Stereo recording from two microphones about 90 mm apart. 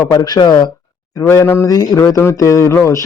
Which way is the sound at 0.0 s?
45° left (ahead or behind).